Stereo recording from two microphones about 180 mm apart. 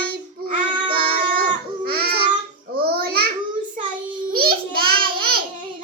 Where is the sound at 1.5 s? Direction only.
60° right (ahead or behind).